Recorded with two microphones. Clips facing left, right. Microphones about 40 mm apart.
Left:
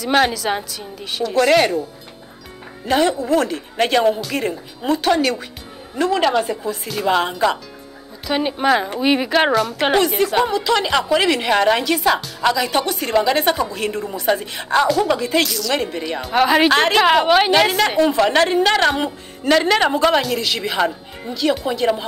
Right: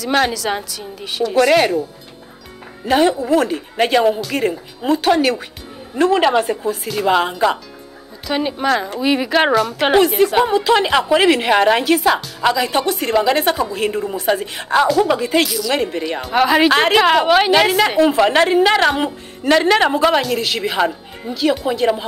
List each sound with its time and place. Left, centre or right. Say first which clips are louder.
0.0 s a woman's voice: even; centre
2.9 s speech: right 2 dB; centre
6.2 s speech: right 2 dB; centre
6.7 s a woman's voice: right 2 dB; centre
8.3 s a woman's voice: left 1 dB; centre
9.3 s a woman's voice: right 2 dB; centre